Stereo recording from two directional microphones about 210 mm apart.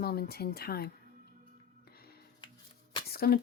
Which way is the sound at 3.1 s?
45° left (ahead or behind).